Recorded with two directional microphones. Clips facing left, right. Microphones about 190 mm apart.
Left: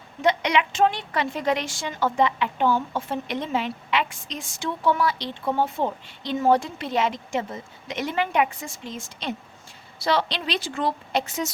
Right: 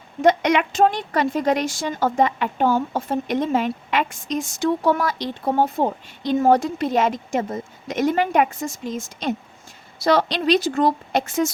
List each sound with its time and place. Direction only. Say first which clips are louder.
0.2 s a woman's voice: right 5 dB; 45° right (ahead or behind)